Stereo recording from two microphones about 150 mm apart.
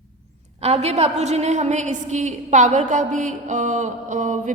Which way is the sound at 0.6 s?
45° right (ahead or behind).